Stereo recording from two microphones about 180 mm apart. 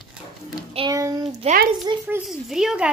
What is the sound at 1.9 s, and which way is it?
Speech, 25° right (ahead or behind).